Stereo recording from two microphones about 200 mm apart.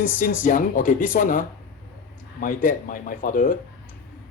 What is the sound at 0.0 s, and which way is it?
Speech, 45° left (ahead or behind).